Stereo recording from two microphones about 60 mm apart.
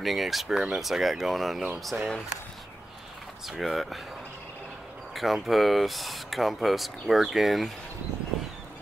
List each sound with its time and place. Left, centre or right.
0.0 s speech: centre
1.9 s speech: right
3.4 s speech: centre
5.1 s speech: centre